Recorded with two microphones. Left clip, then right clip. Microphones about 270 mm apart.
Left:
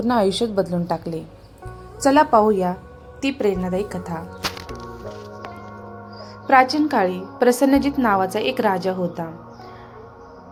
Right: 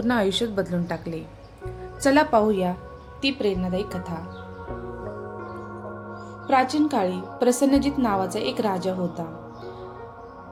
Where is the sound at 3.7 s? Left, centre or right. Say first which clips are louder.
Left 4 dB; left.